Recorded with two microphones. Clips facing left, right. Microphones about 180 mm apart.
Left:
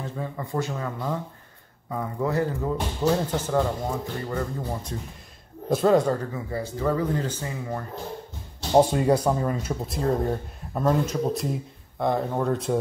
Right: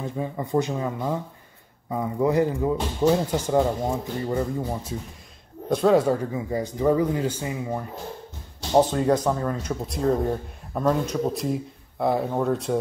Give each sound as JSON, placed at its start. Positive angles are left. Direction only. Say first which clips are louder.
{"t": 0.0, "sound": "speech", "louder": "right 3 dB", "side_deg": -15}
{"t": 5.7, "sound": "speech", "louder": "right 1 dB", "side_deg": 0}
{"t": 8.7, "sound": "speech", "louder": "even", "side_deg": 10}